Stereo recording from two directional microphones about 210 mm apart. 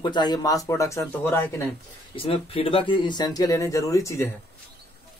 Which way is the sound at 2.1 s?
25° left (ahead or behind).